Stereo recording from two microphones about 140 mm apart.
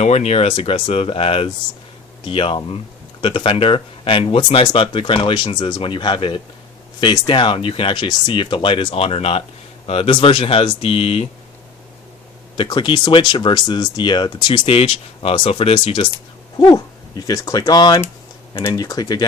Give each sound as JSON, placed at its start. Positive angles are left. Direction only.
{"t": 0.0, "sound": "speech", "side_deg": 50}
{"t": 12.5, "sound": "speech", "side_deg": 30}